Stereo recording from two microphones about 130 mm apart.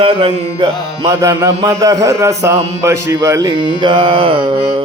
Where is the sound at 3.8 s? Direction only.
35° right (ahead or behind).